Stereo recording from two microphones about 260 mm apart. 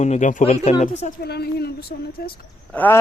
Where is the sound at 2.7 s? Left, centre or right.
Centre.